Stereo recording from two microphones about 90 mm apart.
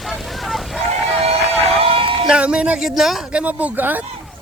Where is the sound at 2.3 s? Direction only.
10° right (ahead or behind).